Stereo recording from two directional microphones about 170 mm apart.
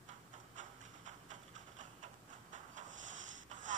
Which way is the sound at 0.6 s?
45° right (ahead or behind).